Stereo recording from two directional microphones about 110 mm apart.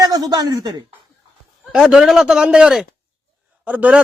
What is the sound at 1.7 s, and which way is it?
Speech, 5° right (ahead or behind).